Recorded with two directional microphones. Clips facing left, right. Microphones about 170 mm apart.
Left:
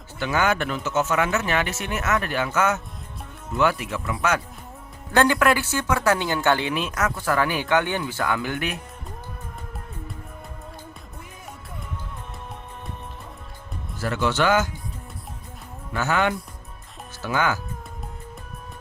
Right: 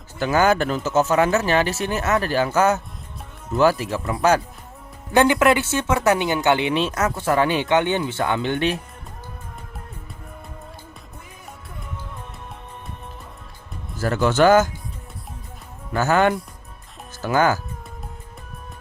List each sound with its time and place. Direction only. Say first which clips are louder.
0.2 s speech: right 5 dB; 40° right (ahead or behind)
5.1 s speech: right 3 dB; 20° right (ahead or behind)
14.0 s speech: right 6 dB; 45° right (ahead or behind)
15.9 s speech: right 5 dB; 40° right (ahead or behind)